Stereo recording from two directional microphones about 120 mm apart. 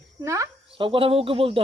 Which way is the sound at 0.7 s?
45° right (ahead or behind).